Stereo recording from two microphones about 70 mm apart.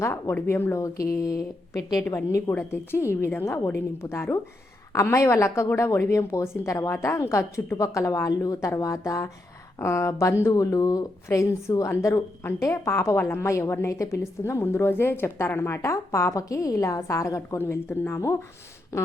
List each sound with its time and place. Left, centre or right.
0.0 s a woman's voice: left
2.0 s a woman's voice: left
2.5 s a woman's voice: left
13.1 s a woman's voice: left
13.4 s a woman's voice: left
17.6 s a woman's voice: left